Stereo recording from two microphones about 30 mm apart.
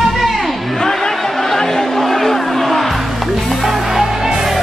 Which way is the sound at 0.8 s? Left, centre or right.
Centre.